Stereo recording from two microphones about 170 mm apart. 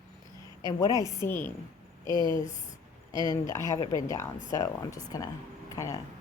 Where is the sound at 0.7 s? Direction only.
20° left (ahead or behind).